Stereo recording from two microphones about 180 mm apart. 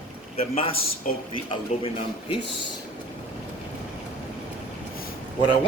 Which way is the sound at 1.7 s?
40° left (ahead or behind).